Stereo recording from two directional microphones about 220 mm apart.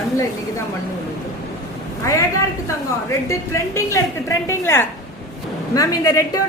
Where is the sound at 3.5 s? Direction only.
15° left (ahead or behind).